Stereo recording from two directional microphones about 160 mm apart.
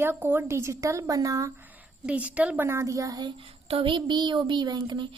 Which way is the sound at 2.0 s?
10° right (ahead or behind).